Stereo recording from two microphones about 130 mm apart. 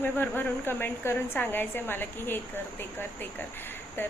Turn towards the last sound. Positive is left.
turn(degrees=15)  # may be behind; listen again after turning